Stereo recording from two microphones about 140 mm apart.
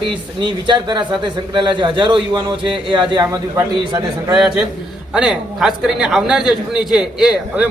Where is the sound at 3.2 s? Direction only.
20° right (ahead or behind).